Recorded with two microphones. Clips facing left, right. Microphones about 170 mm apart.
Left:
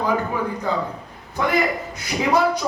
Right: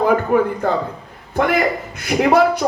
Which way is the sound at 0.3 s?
60° right (ahead or behind).